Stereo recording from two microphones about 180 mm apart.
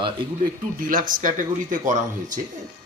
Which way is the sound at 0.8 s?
50° right (ahead or behind).